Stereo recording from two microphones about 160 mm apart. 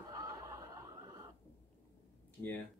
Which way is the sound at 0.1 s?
20° right (ahead or behind).